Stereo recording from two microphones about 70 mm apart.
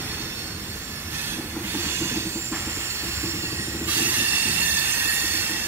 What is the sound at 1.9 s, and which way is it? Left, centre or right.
Train, right.